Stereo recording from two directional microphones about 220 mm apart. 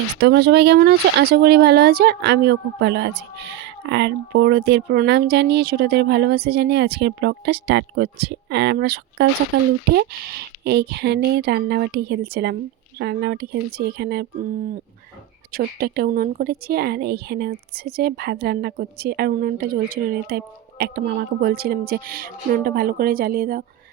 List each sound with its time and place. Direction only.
0.2 s a woman's voice: 50° right (ahead or behind)
15.5 s a woman's voice: 45° right (ahead or behind)